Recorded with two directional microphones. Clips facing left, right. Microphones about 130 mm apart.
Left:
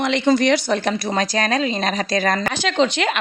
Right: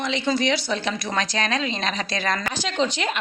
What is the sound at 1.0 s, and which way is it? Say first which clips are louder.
Speech: left 3 dB; 35° left (ahead or behind).